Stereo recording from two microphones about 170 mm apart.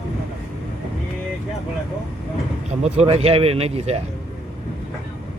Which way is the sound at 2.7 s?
40° right (ahead or behind).